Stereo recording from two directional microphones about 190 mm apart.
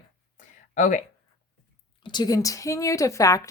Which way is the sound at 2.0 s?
25° left (ahead or behind).